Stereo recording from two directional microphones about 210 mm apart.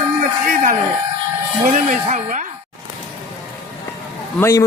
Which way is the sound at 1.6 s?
35° right (ahead or behind).